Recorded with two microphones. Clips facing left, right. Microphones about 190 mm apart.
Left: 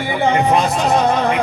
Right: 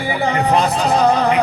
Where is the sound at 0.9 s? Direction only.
35° right (ahead or behind).